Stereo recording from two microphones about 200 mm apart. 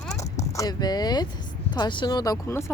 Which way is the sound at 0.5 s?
20° left (ahead or behind).